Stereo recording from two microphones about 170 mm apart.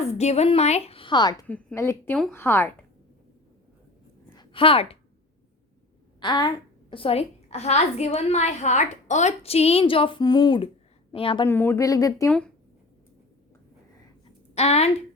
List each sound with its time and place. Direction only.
0.0 s a woman's voice: 40° left (ahead or behind)
1.5 s a woman's voice: 10° left (ahead or behind)
4.4 s a sound: 30° left (ahead or behind)
6.1 s a woman's voice: 25° left (ahead or behind)
11.4 s speech: 15° left (ahead or behind)
14.5 s speech: 40° left (ahead or behind)